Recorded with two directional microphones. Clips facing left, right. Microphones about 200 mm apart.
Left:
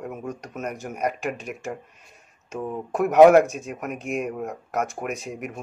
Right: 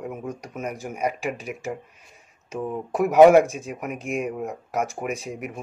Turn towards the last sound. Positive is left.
turn(degrees=0)  # may be behind; listen again after turning